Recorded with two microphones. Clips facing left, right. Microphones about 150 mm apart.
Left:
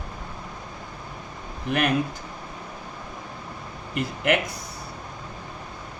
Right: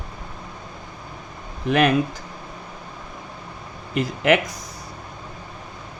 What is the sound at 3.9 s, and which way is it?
Speech, 90° right.